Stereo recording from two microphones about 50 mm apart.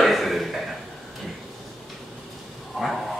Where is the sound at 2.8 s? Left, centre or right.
Centre.